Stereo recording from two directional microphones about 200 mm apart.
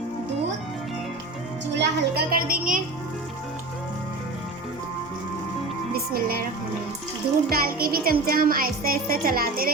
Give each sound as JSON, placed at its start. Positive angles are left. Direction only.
{"t": 1.7, "sound": "a child's voice", "side_deg": -55}
{"t": 6.1, "sound": "a child's voice", "side_deg": -45}
{"t": 7.5, "sound": "a child's voice", "side_deg": -45}